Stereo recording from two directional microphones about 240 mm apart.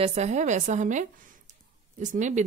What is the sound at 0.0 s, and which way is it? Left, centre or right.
A woman's voice, right.